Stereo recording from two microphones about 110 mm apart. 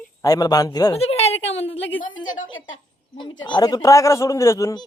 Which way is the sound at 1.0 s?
70° left (ahead or behind).